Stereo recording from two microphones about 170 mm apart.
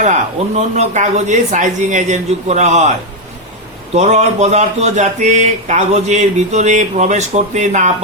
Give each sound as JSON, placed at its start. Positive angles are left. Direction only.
{"t": 0.0, "sound": "speech", "side_deg": -40}
{"t": 3.9, "sound": "speech", "side_deg": -40}